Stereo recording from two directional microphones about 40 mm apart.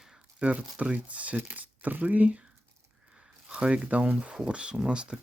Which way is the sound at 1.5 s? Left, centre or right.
Right.